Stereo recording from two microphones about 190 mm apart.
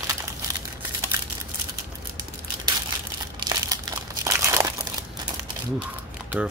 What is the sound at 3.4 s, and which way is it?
Crumpling, 20° right (ahead or behind).